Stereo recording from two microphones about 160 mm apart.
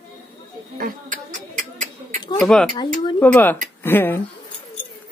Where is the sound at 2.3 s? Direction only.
5° left (ahead or behind).